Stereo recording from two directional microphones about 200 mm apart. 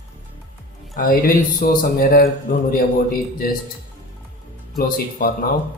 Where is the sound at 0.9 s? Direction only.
45° left (ahead or behind).